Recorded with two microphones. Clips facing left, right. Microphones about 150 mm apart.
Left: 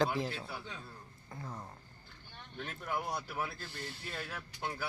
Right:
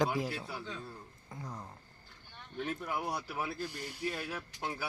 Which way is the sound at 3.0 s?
10° right (ahead or behind).